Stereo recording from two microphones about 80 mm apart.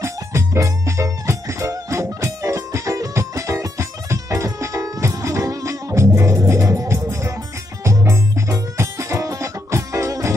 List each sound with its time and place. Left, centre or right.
0.0 s music: right